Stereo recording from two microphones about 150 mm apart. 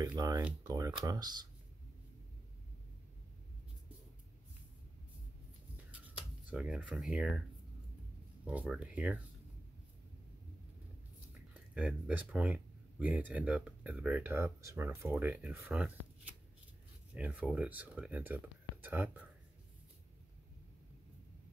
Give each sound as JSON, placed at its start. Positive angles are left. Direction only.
{"t": 0.0, "sound": "speech", "side_deg": -25}
{"t": 5.9, "sound": "a sound", "side_deg": -10}
{"t": 6.4, "sound": "speech", "side_deg": -5}
{"t": 8.7, "sound": "speech", "side_deg": -5}
{"t": 11.5, "sound": "speech", "side_deg": -10}